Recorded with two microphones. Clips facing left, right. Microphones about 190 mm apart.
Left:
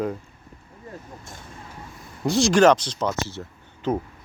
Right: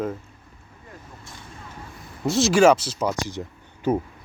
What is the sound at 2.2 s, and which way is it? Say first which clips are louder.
Speech: even; centre (ahead or behind).